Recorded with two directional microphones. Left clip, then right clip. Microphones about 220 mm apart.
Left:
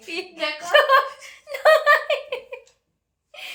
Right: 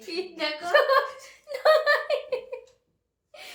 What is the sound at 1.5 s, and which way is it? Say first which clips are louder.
Giggle: left 5 dB; 25° left (ahead or behind).